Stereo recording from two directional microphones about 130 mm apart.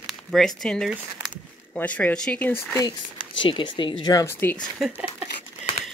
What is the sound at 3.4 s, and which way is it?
Speech, 40° left (ahead or behind).